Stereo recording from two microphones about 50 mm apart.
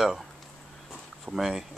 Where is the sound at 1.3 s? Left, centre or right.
Centre.